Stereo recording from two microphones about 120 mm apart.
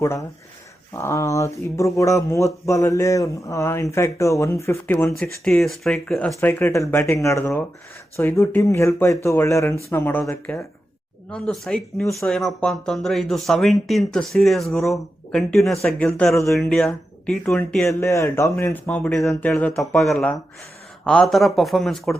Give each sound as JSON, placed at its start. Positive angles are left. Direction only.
{"t": 0.0, "sound": "speech", "side_deg": 25}
{"t": 5.5, "sound": "speech", "side_deg": 0}
{"t": 11.3, "sound": "speech", "side_deg": 5}
{"t": 18.0, "sound": "speech", "side_deg": 25}